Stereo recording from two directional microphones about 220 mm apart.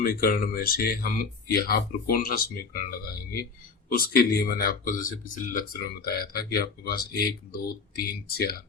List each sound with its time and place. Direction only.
0.0 s speech: 40° left (ahead or behind)
3.8 s speech: 40° left (ahead or behind)